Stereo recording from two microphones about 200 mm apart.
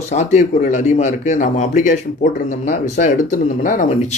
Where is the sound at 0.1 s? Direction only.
35° left (ahead or behind).